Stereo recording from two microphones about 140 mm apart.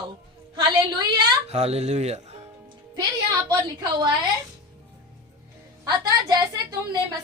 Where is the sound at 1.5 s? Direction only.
50° right (ahead or behind).